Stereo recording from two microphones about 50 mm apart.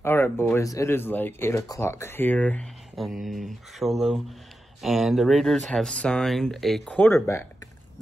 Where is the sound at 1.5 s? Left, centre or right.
Left.